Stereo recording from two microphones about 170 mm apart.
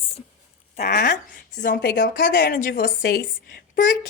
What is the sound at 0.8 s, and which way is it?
Speech, 55° left (ahead or behind).